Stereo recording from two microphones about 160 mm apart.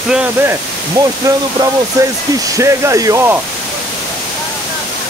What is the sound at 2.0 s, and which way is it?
Speech, 20° right (ahead or behind).